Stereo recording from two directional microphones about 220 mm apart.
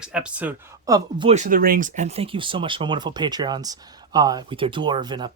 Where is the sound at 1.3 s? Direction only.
35° right (ahead or behind).